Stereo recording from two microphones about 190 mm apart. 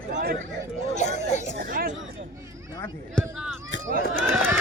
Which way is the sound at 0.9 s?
40° left (ahead or behind).